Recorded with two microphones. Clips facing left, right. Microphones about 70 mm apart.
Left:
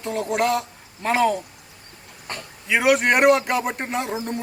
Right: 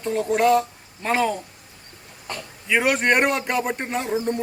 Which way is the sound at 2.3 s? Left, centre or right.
Left.